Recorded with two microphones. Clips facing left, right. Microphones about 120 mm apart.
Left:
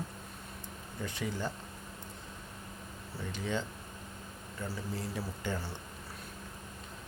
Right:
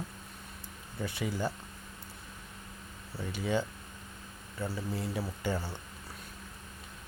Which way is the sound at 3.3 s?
5° right (ahead or behind).